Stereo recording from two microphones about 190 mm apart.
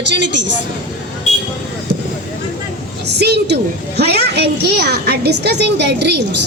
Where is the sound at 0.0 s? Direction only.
65° right (ahead or behind).